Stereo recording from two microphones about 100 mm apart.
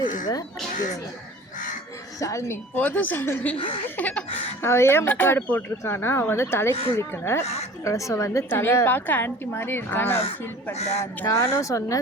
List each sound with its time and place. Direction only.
0.0 s speech: 40° left (ahead or behind)
2.1 s a woman's voice: 30° left (ahead or behind)
2.7 s a woman's voice: 15° left (ahead or behind)
4.6 s a woman's voice: 25° left (ahead or behind)
10.8 s speech: 90° left
11.0 s a woman's voice: 30° left (ahead or behind)